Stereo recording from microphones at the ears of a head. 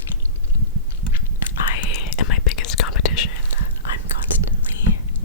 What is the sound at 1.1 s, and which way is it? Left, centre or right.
Whispering, left.